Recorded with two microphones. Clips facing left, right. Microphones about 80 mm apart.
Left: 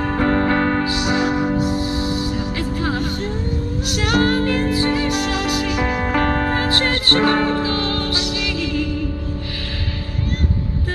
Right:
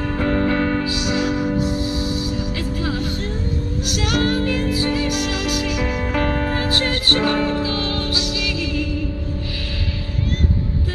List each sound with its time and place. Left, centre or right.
0.0 s music: left
1.5 s music: left